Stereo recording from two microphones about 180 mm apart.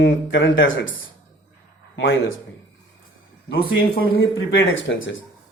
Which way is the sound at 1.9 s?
90° left.